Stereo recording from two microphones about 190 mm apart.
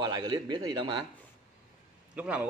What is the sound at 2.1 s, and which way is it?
Speech, 5° right (ahead or behind).